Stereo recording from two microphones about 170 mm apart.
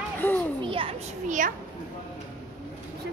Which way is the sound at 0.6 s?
30° right (ahead or behind).